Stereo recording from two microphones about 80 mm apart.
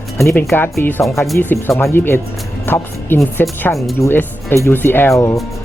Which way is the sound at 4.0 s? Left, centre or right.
Left.